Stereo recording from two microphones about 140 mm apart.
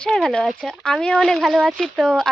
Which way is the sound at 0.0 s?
5° left (ahead or behind).